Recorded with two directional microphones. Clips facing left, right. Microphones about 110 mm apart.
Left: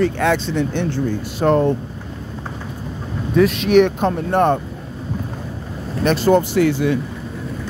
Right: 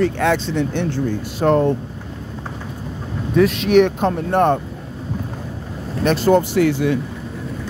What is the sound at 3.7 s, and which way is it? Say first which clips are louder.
Speech: even; 40° right (ahead or behind).